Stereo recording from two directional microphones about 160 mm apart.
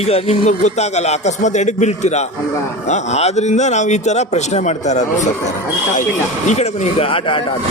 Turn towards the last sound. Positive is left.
turn(degrees=35)  # may be behind; listen again after turning